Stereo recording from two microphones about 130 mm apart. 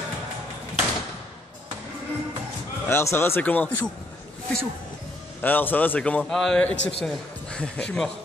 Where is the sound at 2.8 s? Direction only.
20° left (ahead or behind).